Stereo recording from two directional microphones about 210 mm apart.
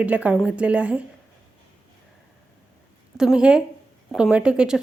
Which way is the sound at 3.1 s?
5° right (ahead or behind).